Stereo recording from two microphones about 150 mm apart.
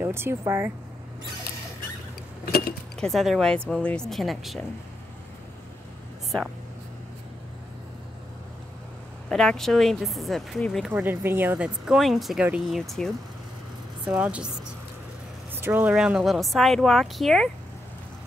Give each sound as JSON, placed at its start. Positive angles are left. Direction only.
{"t": 0.0, "sound": "speech", "side_deg": -15}
{"t": 3.0, "sound": "speech", "side_deg": 0}
{"t": 9.3, "sound": "speech", "side_deg": 5}
{"t": 10.9, "sound": "speech", "side_deg": -15}
{"t": 15.5, "sound": "speech", "side_deg": -10}